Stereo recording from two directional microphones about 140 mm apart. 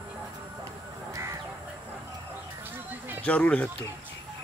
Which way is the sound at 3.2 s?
10° left (ahead or behind).